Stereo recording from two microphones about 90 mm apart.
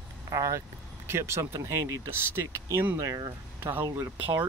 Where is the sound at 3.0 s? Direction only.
40° right (ahead or behind).